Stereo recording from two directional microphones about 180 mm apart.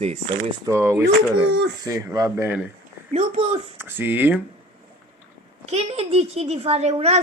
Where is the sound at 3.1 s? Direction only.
40° right (ahead or behind).